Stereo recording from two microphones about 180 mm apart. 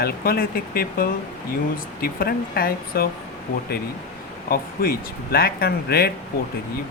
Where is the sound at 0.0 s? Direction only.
55° left (ahead or behind).